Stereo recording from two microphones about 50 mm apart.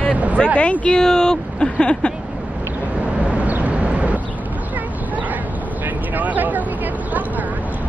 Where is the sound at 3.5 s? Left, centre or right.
Right.